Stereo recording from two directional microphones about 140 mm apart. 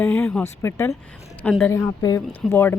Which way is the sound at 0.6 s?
20° left (ahead or behind).